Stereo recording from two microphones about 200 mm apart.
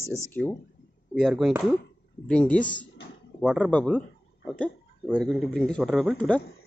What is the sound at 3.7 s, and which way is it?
Speech, 5° left (ahead or behind).